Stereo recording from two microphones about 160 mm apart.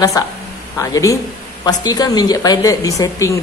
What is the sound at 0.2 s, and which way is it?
A woman's voice, 20° left (ahead or behind).